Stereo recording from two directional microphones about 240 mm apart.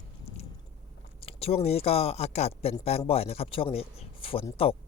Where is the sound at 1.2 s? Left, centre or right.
Left.